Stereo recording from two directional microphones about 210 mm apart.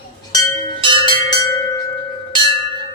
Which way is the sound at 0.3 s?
15° left (ahead or behind).